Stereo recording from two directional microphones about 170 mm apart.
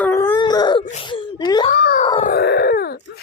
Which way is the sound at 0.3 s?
25° left (ahead or behind).